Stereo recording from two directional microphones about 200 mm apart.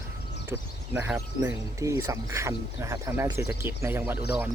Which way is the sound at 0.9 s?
5° right (ahead or behind).